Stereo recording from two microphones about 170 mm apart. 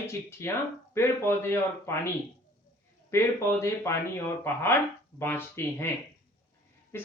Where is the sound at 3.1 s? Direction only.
15° left (ahead or behind).